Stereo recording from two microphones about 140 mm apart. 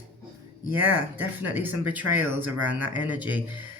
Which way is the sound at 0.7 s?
15° right (ahead or behind).